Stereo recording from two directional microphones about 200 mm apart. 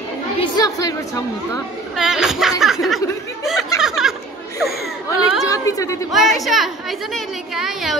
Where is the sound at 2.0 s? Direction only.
5° right (ahead or behind).